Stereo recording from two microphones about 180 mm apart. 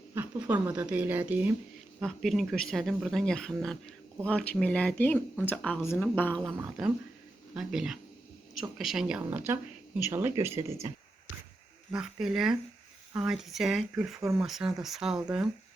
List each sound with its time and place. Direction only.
0.1 s a woman's voice: 10° right (ahead or behind); by 6.4 s 10° left (ahead or behind)
6.6 s speech: 5° right (ahead or behind)
11.9 s speech: 5° right (ahead or behind)
14.2 s speech: 15° right (ahead or behind)
14.4 s speech: centre (ahead or behind)